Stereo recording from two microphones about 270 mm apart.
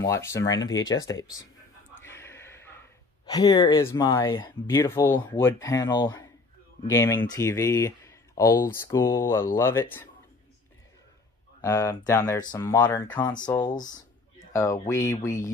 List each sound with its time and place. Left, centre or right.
0.0 s speech: centre
2.0 s a sound: centre
3.3 s speech: centre
11.6 s speech: centre